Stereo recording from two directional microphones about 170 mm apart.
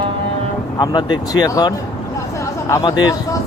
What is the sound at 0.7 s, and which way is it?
Speech, 25° left (ahead or behind).